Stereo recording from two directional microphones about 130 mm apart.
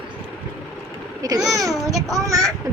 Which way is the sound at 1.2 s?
30° right (ahead or behind).